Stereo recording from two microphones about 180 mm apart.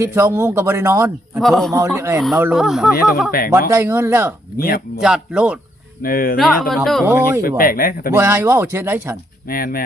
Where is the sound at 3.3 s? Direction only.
55° left (ahead or behind).